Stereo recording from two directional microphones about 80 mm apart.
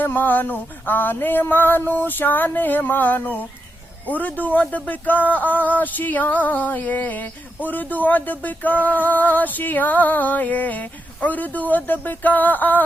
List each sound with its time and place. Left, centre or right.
0.0 s speech: left